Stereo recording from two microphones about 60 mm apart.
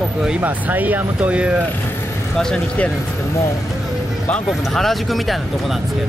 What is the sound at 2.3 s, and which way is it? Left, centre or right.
Speech, centre.